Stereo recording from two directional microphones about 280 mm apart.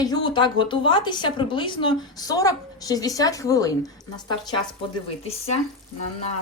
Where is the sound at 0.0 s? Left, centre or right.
Centre.